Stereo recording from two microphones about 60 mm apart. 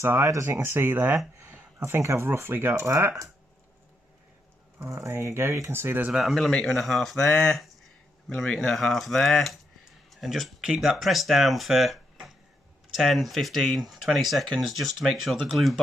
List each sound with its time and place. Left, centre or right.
0.0 s speech: right
0.3 s speech: right
0.6 s speech: right
1.4 s speech: right
2.7 s speech: right
4.8 s speech: right
6.1 s speech: centre
6.5 s a man's voice: centre
10.6 s speech: centre